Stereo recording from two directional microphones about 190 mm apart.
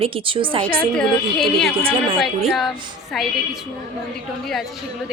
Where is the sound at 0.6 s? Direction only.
5° left (ahead or behind).